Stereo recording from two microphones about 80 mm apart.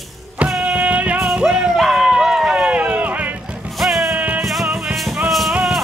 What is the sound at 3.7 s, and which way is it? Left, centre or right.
Music, centre.